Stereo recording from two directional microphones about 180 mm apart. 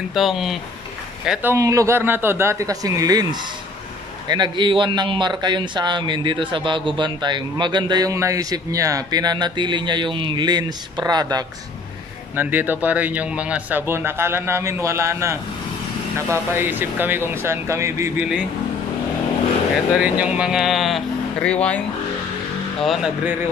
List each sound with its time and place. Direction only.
0.1 s speech: centre (ahead or behind); by 11.4 s 20° right (ahead or behind)
12.4 s speech: 10° right (ahead or behind)
20.0 s speech: 5° right (ahead or behind)
22.8 s speech: 5° right (ahead or behind)